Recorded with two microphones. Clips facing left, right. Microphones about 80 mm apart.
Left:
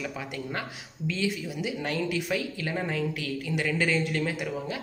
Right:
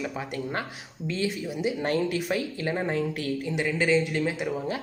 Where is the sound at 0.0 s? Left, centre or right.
Right.